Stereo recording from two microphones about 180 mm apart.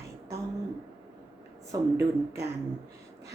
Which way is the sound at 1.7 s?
20° right (ahead or behind).